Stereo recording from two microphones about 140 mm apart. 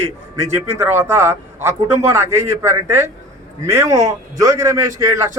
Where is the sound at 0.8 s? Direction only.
15° right (ahead or behind).